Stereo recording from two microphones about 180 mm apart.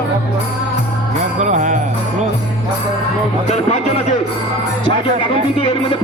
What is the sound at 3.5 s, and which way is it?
Speech, 40° left (ahead or behind).